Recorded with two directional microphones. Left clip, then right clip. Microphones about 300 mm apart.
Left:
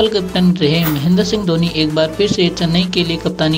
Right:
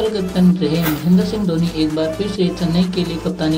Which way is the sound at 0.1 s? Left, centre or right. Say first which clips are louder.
Left 3 dB; left.